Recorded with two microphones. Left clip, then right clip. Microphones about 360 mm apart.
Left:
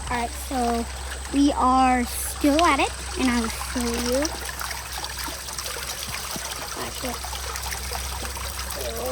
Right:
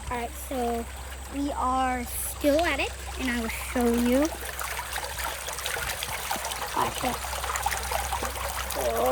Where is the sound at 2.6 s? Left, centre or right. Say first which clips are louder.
Left 7 dB; centre.